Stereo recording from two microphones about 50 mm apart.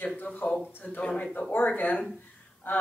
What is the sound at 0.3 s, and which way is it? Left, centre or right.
Speech, left.